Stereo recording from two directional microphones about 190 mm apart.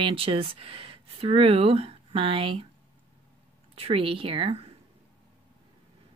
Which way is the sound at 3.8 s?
30° right (ahead or behind).